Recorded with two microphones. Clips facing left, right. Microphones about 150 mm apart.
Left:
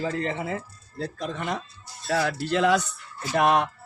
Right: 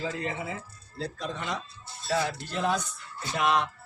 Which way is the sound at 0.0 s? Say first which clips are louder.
Left 5 dB; 50° left (ahead or behind).